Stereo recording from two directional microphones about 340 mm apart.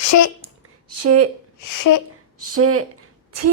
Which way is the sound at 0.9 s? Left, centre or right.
Right.